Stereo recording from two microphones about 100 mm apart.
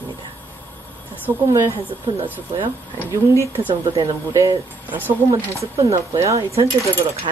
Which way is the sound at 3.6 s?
30° right (ahead or behind).